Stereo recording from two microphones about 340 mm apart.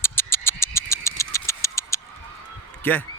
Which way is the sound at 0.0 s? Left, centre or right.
Centre.